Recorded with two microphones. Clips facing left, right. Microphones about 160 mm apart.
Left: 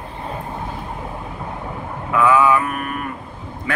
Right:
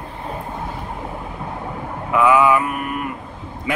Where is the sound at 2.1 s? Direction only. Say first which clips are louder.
Right 1 dB; 15° right (ahead or behind).